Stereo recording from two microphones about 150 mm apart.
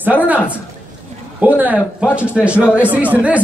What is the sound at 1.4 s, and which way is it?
A man's voice, 10° right (ahead or behind).